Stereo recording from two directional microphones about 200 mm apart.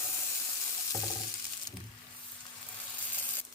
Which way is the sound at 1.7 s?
20° left (ahead or behind).